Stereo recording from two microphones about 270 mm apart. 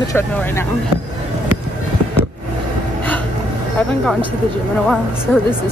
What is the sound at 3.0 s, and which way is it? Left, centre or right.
Hiccup, centre.